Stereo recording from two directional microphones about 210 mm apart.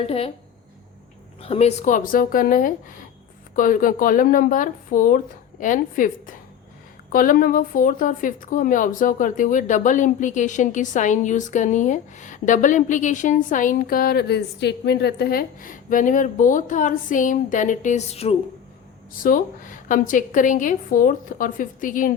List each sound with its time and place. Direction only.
0.0 s speech: 30° left (ahead or behind)
1.4 s a woman's voice: 30° left (ahead or behind)
19.2 s a woman's voice: 40° left (ahead or behind)